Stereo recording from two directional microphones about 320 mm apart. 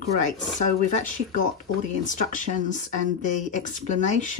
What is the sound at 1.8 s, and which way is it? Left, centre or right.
Speech, left.